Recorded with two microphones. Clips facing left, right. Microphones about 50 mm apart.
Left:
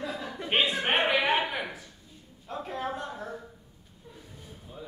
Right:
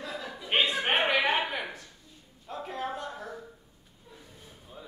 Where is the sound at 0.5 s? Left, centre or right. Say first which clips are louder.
Even; centre.